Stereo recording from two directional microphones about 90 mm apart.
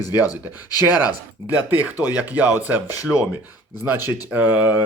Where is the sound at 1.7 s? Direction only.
20° right (ahead or behind).